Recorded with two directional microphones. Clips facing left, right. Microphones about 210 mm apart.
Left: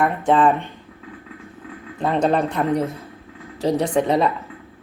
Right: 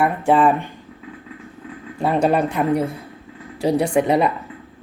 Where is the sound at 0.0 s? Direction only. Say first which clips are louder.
Right 1 dB; 10° right (ahead or behind).